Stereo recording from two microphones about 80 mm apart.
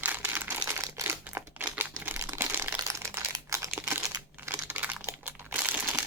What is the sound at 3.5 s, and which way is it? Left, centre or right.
Crumpling, right.